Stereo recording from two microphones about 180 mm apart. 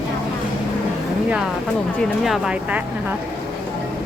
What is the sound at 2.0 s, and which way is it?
Speech, 5° right (ahead or behind).